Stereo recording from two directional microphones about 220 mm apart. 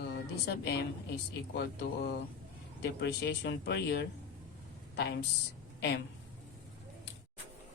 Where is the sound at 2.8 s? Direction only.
50° left (ahead or behind).